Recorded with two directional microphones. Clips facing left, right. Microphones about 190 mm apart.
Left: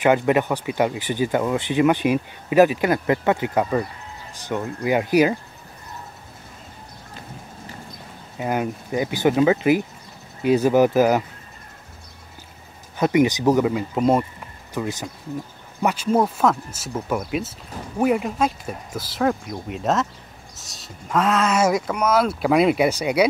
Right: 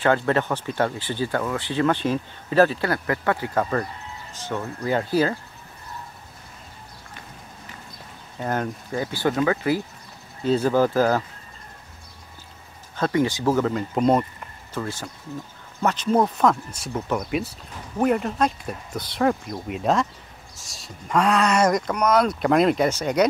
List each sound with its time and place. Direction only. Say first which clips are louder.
0.0 s speech: left 3 dB; 15° left (ahead or behind)
8.4 s speech: left 2 dB; 10° left (ahead or behind)
12.9 s speech: left 4 dB; 15° left (ahead or behind)